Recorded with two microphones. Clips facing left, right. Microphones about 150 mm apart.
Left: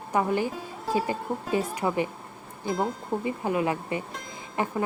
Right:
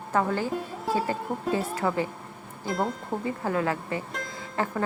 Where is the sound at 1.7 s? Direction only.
20° left (ahead or behind).